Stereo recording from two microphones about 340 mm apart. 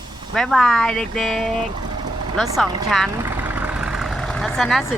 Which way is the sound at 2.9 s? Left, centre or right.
Centre.